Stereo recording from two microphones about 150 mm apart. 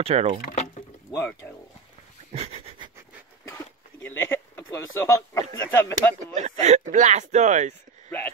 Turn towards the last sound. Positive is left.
turn(degrees=-50)  # may be behind; listen again after turning